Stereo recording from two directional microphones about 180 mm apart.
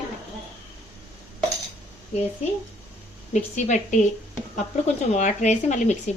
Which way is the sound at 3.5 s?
40° left (ahead or behind).